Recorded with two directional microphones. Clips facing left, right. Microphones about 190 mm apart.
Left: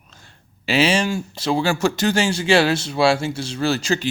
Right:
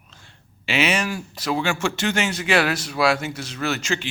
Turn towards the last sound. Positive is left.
turn(degrees=35)  # may be behind; listen again after turning